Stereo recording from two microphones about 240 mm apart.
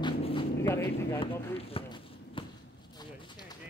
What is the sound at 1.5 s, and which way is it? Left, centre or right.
Basketball bounce, left.